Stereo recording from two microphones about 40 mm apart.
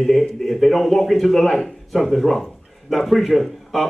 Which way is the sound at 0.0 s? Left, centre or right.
Centre.